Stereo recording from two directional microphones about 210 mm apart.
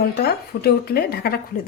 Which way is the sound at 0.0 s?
50° left (ahead or behind).